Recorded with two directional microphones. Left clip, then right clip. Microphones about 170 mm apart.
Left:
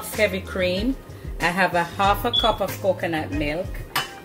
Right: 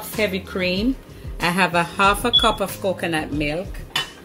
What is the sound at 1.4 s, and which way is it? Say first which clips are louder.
Speech: right 1 dB; 75° right (ahead or behind).